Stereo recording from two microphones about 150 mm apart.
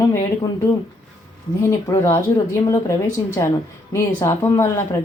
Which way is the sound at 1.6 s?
15° left (ahead or behind).